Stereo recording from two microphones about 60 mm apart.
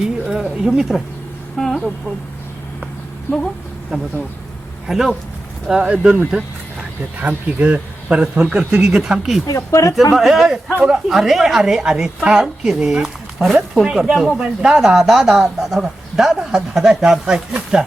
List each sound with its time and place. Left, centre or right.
0.0 s a sound: centre
1.5 s speech: centre
3.9 s speech: centre
7.2 s speech: right; by 9.4 s centre
9.6 s speech: left
10.1 s speech: centre
10.7 s speech: centre
11.1 s speech: centre
14.4 s speech: centre